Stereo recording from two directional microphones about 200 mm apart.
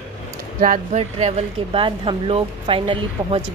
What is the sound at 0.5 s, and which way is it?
Speech, 40° right (ahead or behind).